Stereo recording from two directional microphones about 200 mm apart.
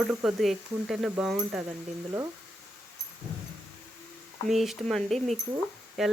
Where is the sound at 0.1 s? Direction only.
5° right (ahead or behind).